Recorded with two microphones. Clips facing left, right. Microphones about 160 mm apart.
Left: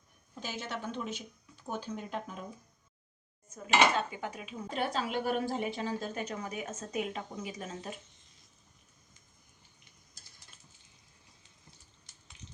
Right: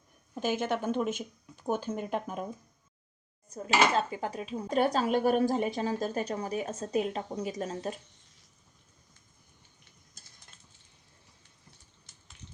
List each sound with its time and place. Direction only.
0.3 s speech: 50° right (ahead or behind)
3.5 s speech: 35° right (ahead or behind)